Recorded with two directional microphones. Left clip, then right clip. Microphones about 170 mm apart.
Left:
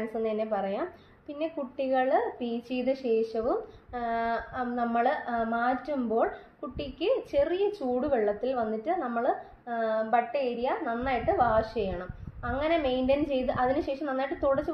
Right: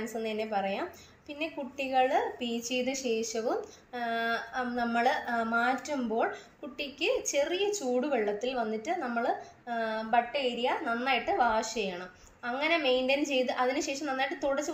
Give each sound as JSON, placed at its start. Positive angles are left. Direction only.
{"t": 0.1, "sound": "a woman's voice", "side_deg": 50}